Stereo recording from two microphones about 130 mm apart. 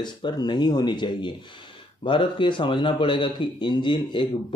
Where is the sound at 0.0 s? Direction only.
35° left (ahead or behind).